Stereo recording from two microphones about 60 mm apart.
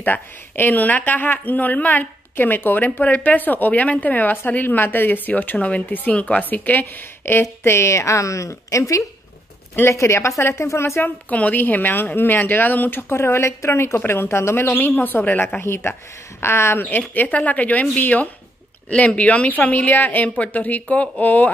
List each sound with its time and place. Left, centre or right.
0.0 s speech: left
7.6 s a woman's voice: left
9.8 s speech: left
11.0 s a woman's voice: left
13.1 s a woman's voice: left
15.6 s speech: left
17.1 s speech: left